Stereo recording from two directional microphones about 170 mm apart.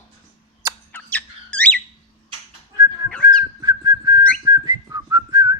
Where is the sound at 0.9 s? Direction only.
10° left (ahead or behind).